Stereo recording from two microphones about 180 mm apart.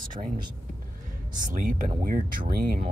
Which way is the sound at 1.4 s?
50° right (ahead or behind).